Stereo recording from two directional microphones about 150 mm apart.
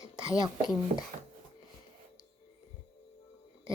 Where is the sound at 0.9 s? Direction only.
50° right (ahead or behind).